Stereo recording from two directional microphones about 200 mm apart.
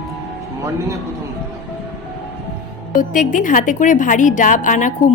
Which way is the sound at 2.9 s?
40° left (ahead or behind).